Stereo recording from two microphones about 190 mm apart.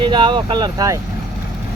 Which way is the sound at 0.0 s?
25° right (ahead or behind).